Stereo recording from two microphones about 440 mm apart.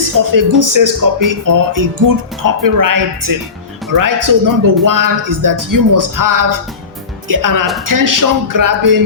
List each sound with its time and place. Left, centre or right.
0.0 s speech: right